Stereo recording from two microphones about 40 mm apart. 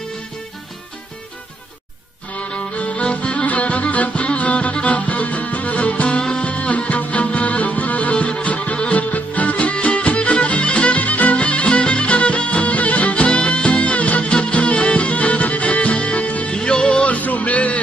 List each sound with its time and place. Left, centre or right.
2.3 s music: left
6.0 s music: left
16.5 s music: left